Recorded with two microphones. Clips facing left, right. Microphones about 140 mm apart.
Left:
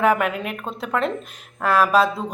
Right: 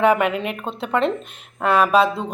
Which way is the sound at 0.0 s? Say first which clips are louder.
Right 2 dB; centre (ahead or behind).